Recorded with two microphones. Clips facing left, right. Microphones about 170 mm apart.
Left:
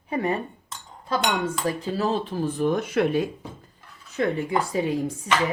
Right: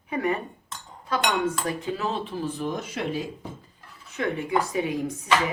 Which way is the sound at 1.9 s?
35° left (ahead or behind).